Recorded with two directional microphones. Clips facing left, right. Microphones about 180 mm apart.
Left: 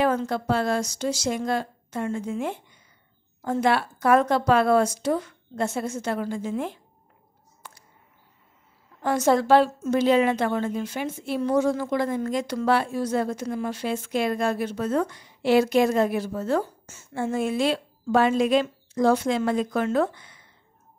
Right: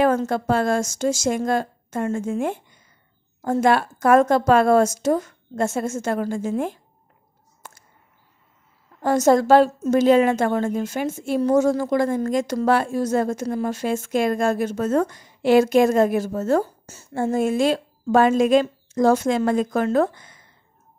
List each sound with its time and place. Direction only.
0.0 s a woman's voice: 45° right (ahead or behind)
7.6 s a sound: 45° right (ahead or behind)
9.0 s a woman's voice: 40° right (ahead or behind)